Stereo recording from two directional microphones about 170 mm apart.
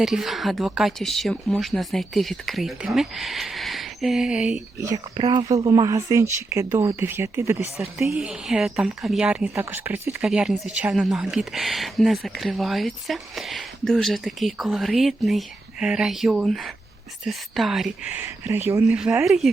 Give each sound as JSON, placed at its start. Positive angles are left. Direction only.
{"t": 0.0, "sound": "speech", "side_deg": 0}
{"t": 4.8, "sound": "speech", "side_deg": -20}
{"t": 8.1, "sound": "speech", "side_deg": -5}